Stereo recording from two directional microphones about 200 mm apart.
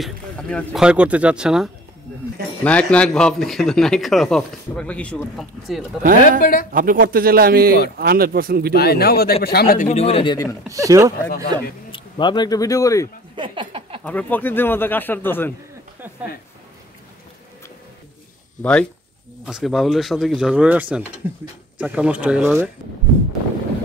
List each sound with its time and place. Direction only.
0.0 s speech: 5° left (ahead or behind)
0.8 s speech: 5° right (ahead or behind)
6.4 s speech: 45° left (ahead or behind)
6.7 s a man's voice: 45° right (ahead or behind)
8.7 s speech: 50° left (ahead or behind)
9.8 s speech: 30° left (ahead or behind)
10.7 s speech: 15° right (ahead or behind)
11.9 s speech: 25° left (ahead or behind)
13.4 s a sound: 25° right (ahead or behind)
14.0 s a man's voice: 10° left (ahead or behind)
18.6 s speech: 5° left (ahead or behind)